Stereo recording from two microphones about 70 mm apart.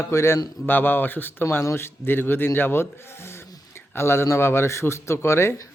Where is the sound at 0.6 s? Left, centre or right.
Left.